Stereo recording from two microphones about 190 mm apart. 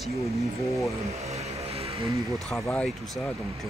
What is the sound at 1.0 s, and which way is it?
Vehicle, 35° right (ahead or behind).